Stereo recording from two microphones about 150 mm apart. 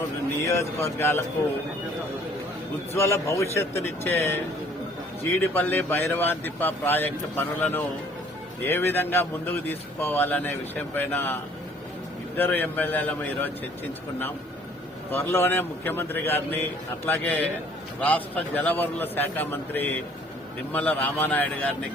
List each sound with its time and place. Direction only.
0.4 s a man's voice: 20° left (ahead or behind)
2.9 s a man's voice: 15° left (ahead or behind)
5.4 s a man's voice: 15° left (ahead or behind)
12.4 s a man's voice: 10° left (ahead or behind)
15.1 s a man's voice: 15° left (ahead or behind)